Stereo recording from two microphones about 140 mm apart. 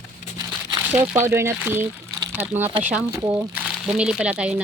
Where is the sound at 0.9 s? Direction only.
10° right (ahead or behind).